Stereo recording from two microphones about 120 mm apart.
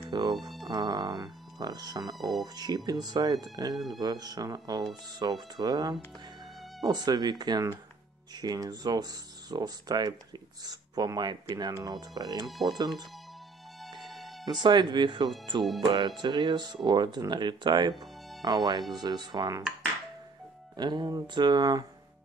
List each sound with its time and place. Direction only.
0.0 s music: 35° right (ahead or behind)
0.4 s music: centre (ahead or behind)
0.7 s speech: 35° right (ahead or behind)
3.7 s speech: centre (ahead or behind)
4.0 s speech: 35° right (ahead or behind)
12.4 s speech: centre (ahead or behind)
13.8 s music: centre (ahead or behind)
14.5 s speech: 40° right (ahead or behind)
20.7 s speech: 35° right (ahead or behind)